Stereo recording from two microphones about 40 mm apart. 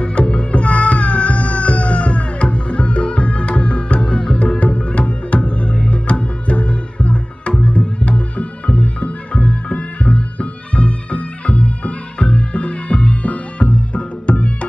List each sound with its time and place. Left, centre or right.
0.0 s music: left